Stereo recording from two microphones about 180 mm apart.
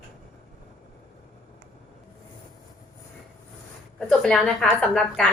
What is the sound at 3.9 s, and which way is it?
A woman's voice, 5° left (ahead or behind).